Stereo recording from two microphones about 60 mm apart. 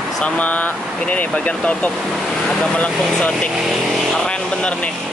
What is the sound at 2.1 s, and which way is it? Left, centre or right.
Speech, centre.